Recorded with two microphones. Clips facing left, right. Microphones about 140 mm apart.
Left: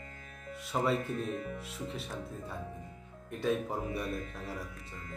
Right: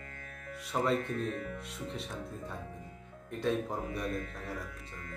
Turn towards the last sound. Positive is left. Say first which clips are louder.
# right 1 dB
turn(degrees=5)  # may be behind; listen again after turning